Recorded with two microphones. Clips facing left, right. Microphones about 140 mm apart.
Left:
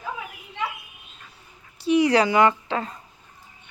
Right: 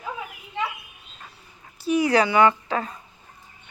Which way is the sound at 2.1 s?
35° left (ahead or behind).